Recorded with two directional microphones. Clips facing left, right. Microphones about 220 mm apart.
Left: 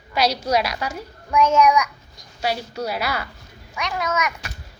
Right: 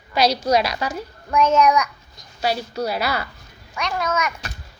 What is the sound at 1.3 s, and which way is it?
Child singing, 10° left (ahead or behind).